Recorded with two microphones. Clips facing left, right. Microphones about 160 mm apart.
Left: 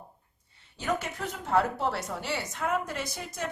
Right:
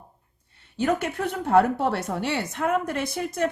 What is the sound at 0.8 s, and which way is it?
Speech, 60° right (ahead or behind).